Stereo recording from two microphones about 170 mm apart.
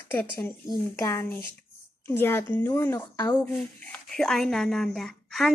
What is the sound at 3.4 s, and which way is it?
Speech, 5° left (ahead or behind).